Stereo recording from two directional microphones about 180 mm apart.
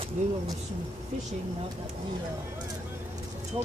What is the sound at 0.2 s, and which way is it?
Speech, 40° right (ahead or behind).